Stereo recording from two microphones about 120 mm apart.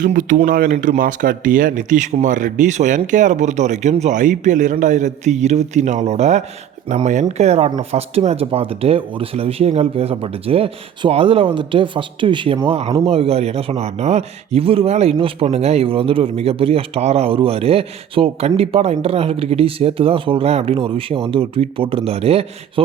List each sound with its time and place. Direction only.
0.0 s speech: 90° right; by 6.4 s 70° right (ahead or behind)
6.8 s a man's voice: 90° right; by 12.5 s 45° right (ahead or behind)
12.6 s a man's voice: 55° right (ahead or behind)